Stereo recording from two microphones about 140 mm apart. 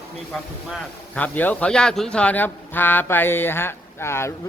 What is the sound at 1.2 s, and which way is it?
Speech, 10° left (ahead or behind).